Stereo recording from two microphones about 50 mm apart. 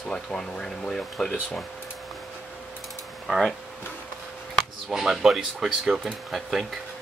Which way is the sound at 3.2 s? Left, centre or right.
Centre.